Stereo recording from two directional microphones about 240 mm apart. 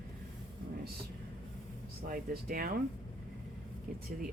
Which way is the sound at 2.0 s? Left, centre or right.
Right.